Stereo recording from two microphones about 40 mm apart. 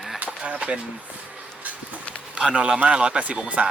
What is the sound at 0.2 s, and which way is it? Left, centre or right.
Skateboard, right.